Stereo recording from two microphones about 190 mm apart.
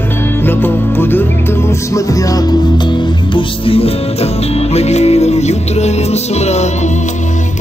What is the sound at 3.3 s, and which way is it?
Music, 30° left (ahead or behind).